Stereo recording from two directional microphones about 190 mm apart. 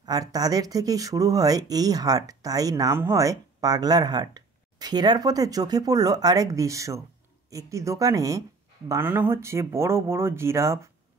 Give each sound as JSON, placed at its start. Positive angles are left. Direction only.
{"t": 0.0, "sound": "speech", "side_deg": -20}